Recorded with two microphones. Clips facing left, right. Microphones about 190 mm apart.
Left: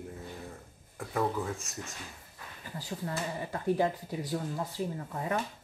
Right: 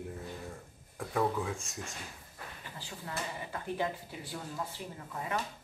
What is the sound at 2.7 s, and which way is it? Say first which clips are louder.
Speech: left 6 dB; 40° left (ahead or behind).